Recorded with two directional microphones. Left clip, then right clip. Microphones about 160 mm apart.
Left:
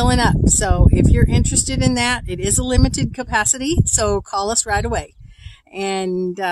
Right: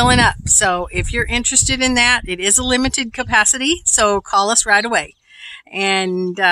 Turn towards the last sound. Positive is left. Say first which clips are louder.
# right 4 dB
turn(degrees=-10)  # may be behind; listen again after turning